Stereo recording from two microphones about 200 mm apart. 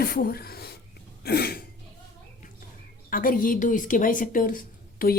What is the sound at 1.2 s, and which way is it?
Sneeze, 50° left (ahead or behind).